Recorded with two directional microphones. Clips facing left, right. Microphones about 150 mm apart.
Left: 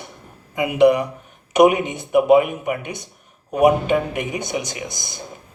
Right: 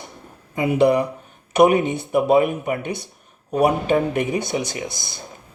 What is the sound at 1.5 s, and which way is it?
Speech, 15° left (ahead or behind).